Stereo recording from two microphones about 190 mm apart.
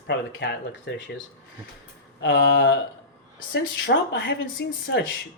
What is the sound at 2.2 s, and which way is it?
Speech, 65° left (ahead or behind).